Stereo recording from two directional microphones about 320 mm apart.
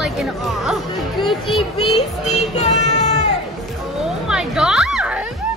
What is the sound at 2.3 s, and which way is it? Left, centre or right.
Speech, left.